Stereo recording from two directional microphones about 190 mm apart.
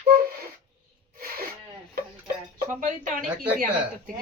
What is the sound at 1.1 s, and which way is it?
Sneeze, 50° right (ahead or behind).